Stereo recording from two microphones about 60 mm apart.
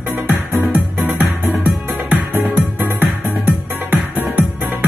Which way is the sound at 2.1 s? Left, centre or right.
Right.